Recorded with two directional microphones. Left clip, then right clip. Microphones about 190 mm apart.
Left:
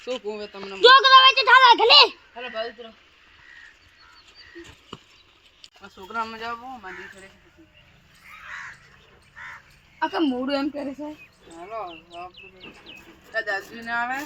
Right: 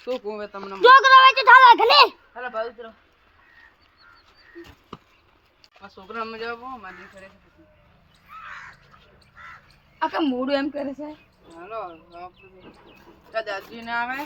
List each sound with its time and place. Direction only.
0.0 s speech: 25° right (ahead or behind)
0.8 s a woman's voice: centre (ahead or behind)
4.9 s horse: 10° right (ahead or behind)
6.3 s speech: 25° right (ahead or behind)
10.0 s a woman's voice: 5° right (ahead or behind)
11.9 s speech: 40° right (ahead or behind)
13.5 s speech: 25° right (ahead or behind)